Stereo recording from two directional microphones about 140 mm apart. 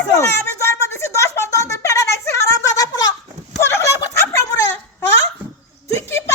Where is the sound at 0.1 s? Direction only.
20° left (ahead or behind).